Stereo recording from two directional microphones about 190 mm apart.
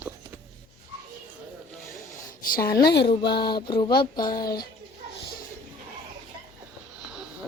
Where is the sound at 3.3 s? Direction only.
25° left (ahead or behind).